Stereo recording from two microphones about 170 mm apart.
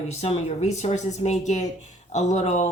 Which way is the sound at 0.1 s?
40° left (ahead or behind).